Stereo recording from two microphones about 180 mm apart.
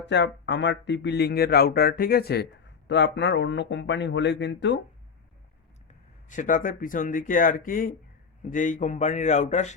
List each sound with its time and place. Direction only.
0.0 s speech: 75° left (ahead or behind)
6.2 s speech: 45° left (ahead or behind)